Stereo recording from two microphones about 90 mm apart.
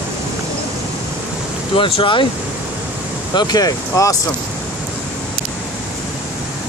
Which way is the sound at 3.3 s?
45° left (ahead or behind).